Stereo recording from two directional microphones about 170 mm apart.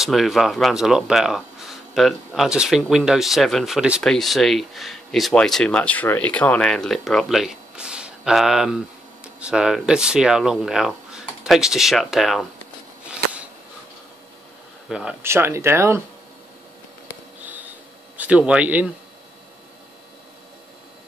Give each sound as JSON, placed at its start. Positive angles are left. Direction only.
{"t": 0.0, "sound": "speech", "side_deg": 0}
{"t": 14.9, "sound": "speech", "side_deg": -5}
{"t": 17.4, "sound": "a sound", "side_deg": -10}
{"t": 18.1, "sound": "speech", "side_deg": -10}